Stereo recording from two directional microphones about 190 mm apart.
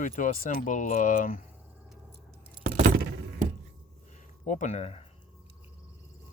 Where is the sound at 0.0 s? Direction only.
40° left (ahead or behind).